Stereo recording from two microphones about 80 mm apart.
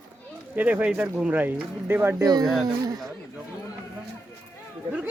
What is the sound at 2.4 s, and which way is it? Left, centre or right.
Speech, centre.